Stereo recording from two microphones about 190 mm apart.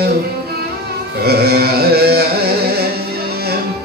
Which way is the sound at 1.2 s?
55° right (ahead or behind).